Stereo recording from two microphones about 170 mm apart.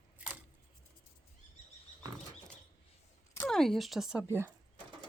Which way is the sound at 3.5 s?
Centre (ahead or behind).